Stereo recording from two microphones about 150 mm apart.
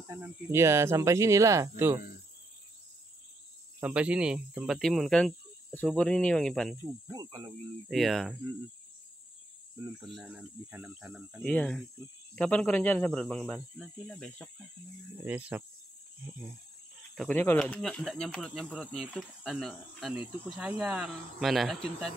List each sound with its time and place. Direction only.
0.1 s speech: 20° right (ahead or behind)
3.8 s speech: 10° right (ahead or behind)
7.1 s speech: 30° right (ahead or behind)
7.9 s speech: centre (ahead or behind)
10.2 s speech: 10° right (ahead or behind)
11.4 s speech: 5° left (ahead or behind)
15.2 s speech: 10° right (ahead or behind)
17.1 s speech: centre (ahead or behind)
17.4 s speech: 10° left (ahead or behind)